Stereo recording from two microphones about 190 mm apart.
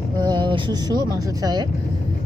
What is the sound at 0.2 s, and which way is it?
Speech, 25° right (ahead or behind).